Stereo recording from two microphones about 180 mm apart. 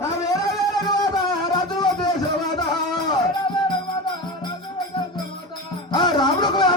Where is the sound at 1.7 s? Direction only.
25° left (ahead or behind).